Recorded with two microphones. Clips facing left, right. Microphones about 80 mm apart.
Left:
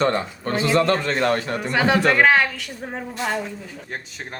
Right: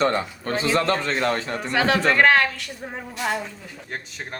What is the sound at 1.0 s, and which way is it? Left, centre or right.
Speech, left.